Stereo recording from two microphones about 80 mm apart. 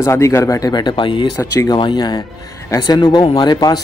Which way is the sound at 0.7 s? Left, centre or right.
Left.